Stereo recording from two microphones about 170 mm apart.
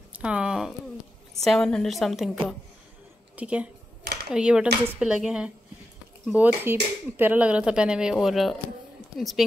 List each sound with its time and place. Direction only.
0.1 s a woman's voice: 5° right (ahead or behind)
4.0 s a sound: 70° right (ahead or behind)
4.3 s speech: 5° right (ahead or behind)